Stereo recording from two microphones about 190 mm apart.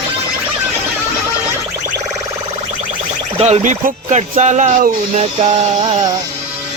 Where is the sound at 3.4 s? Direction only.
35° right (ahead or behind).